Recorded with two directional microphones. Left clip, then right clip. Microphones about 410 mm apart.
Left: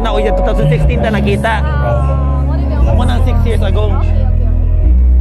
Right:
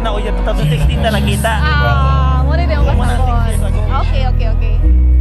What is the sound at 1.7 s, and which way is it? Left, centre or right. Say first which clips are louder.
Music: right 2 dB; right.